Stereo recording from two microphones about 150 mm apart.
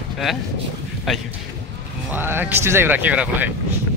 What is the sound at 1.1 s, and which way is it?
Speech, centre (ahead or behind).